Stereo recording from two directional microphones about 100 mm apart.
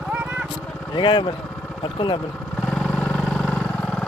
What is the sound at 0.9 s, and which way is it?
Speech, 55° left (ahead or behind).